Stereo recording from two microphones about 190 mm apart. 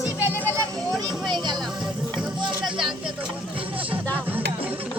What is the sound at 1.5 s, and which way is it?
Music, centre (ahead or behind).